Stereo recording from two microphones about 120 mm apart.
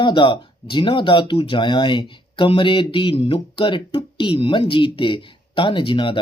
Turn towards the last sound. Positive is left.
turn(degrees=45)  # may be behind; listen again after turning